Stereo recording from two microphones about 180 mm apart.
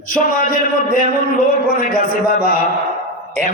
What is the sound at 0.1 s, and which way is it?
A man's voice, 50° left (ahead or behind).